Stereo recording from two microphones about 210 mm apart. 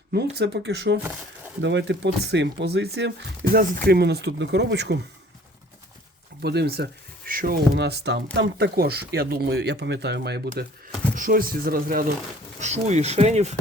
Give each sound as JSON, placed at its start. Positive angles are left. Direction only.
{"t": 0.1, "sound": "speech", "side_deg": -50}
{"t": 6.4, "sound": "speech", "side_deg": -50}
{"t": 11.1, "sound": "speech", "side_deg": -40}
{"t": 12.5, "sound": "speech", "side_deg": -35}